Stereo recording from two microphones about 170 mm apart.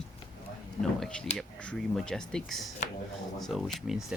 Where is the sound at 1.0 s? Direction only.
5° left (ahead or behind).